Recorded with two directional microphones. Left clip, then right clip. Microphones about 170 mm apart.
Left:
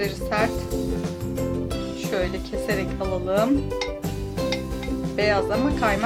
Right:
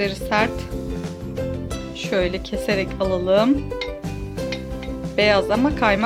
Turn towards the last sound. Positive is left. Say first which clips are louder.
# right 4 dB
turn(degrees=-50)  # may be behind; listen again after turning